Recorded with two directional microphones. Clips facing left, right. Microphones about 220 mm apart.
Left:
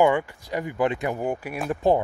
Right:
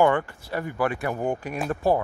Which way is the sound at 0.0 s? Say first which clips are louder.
Left 1 dB; 15° left (ahead or behind).